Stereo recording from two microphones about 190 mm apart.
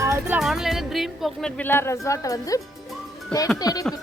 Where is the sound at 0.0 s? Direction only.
15° right (ahead or behind).